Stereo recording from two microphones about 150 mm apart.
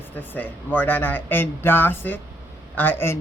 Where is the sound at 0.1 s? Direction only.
15° left (ahead or behind).